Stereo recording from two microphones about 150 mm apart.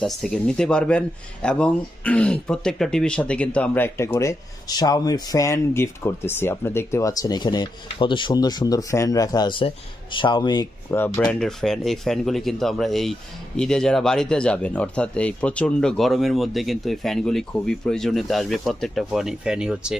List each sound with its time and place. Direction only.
0.0 s speech: centre (ahead or behind); by 10.7 s 30° left (ahead or behind)
10.9 s speech: 15° left (ahead or behind)
11.2 s speech: 5° left (ahead or behind)